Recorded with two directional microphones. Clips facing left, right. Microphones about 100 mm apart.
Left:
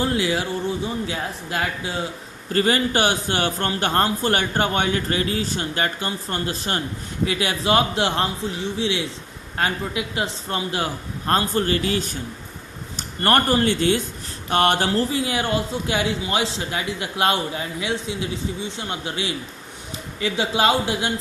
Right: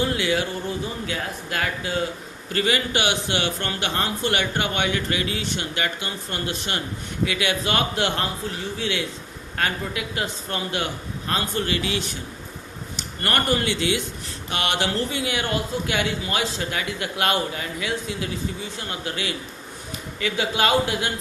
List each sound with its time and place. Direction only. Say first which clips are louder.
0.0 s speech: left 1 dB; 30° left (ahead or behind)